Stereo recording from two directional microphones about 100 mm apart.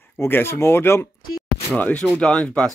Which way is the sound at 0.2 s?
25° left (ahead or behind).